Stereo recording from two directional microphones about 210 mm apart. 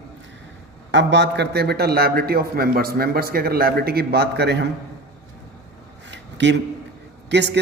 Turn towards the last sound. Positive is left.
turn(degrees=-55)  # may be behind; listen again after turning